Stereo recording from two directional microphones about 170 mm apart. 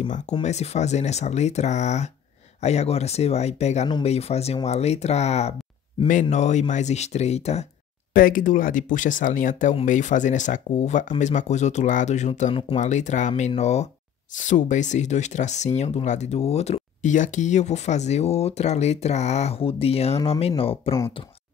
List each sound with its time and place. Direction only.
0.1 s speech: 40° left (ahead or behind)
8.1 s speech: 55° left (ahead or behind); by 21.0 s 35° left (ahead or behind)